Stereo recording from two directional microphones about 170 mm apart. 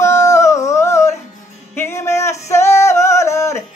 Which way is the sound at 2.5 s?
15° left (ahead or behind).